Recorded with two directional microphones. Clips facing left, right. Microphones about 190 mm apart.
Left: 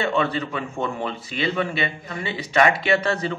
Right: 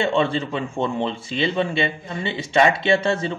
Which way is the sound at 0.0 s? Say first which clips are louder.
Right 2 dB; 25° right (ahead or behind).